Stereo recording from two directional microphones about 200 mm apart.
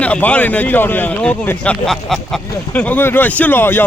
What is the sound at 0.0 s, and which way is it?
Speech, 5° left (ahead or behind).